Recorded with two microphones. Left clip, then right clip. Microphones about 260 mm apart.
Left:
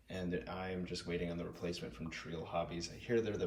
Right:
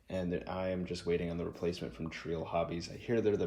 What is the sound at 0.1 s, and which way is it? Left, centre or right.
Speech, right.